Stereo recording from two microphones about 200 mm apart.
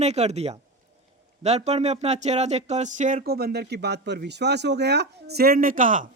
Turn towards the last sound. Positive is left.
turn(degrees=-40)  # may be behind; listen again after turning